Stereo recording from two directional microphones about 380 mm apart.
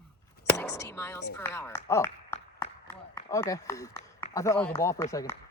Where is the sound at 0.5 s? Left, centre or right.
Centre.